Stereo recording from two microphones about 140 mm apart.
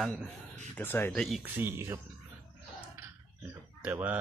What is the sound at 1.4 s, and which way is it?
Speech, 15° right (ahead or behind).